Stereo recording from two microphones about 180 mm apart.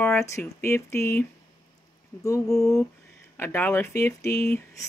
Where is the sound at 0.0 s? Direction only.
15° left (ahead or behind).